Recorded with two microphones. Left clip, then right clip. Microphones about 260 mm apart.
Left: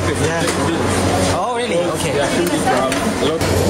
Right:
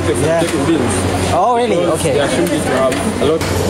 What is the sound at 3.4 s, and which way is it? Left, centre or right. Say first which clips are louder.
Speech: even; centre.